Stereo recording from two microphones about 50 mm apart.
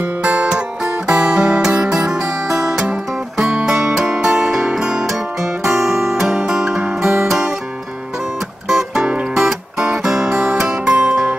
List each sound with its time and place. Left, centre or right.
0.2 s music: right
2.0 s music: centre
8.6 s music: centre
10.3 s music: right